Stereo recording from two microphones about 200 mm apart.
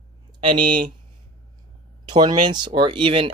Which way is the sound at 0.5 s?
45° right (ahead or behind).